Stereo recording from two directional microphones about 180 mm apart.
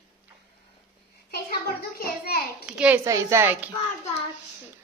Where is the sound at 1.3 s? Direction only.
60° left (ahead or behind).